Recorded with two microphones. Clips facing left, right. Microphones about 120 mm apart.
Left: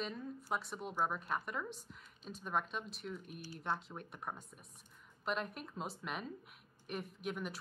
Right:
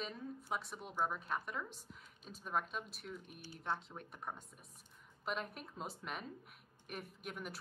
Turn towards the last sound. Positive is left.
turn(degrees=0)  # may be behind; listen again after turning